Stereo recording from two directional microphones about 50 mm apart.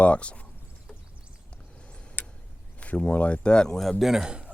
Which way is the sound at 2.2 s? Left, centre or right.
Left.